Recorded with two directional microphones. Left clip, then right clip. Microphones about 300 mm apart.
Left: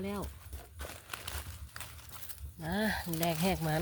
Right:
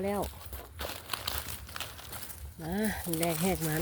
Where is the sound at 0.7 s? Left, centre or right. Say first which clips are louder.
Right 7 dB; centre.